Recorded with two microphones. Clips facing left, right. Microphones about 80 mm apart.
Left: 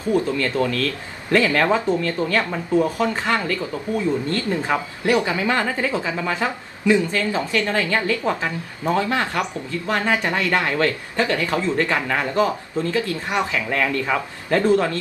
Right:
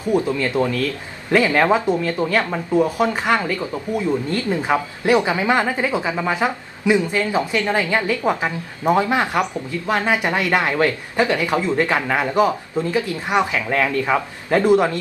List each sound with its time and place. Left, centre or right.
0.1 s speech: centre